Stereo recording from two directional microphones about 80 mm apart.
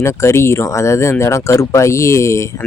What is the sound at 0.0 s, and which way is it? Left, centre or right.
Speech, left.